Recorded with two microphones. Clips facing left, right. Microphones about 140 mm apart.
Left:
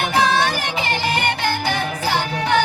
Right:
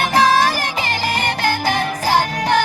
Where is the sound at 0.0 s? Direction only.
40° right (ahead or behind).